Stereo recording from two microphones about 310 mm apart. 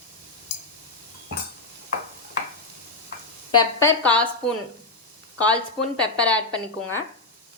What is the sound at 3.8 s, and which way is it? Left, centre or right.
Speech, centre.